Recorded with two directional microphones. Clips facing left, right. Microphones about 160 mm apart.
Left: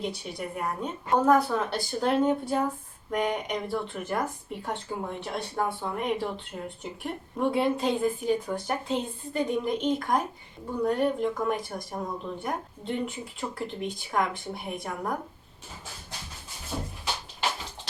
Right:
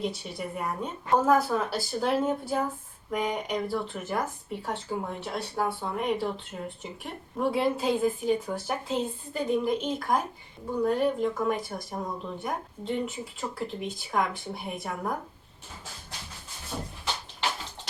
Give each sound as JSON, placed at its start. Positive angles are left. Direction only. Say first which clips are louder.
{"t": 0.0, "sound": "speech", "louder": "right 1 dB", "side_deg": 0}